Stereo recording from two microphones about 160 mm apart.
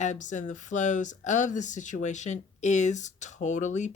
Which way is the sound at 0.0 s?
50° left (ahead or behind).